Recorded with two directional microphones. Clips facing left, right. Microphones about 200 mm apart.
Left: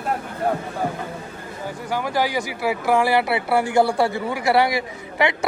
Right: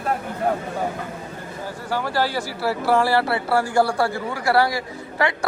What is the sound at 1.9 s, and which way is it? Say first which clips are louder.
Speech: left 1 dB; 15° left (ahead or behind).